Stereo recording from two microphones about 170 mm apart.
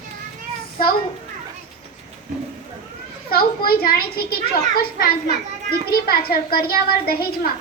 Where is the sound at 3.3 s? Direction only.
65° left (ahead or behind).